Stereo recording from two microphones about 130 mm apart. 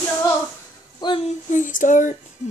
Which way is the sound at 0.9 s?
35° left (ahead or behind).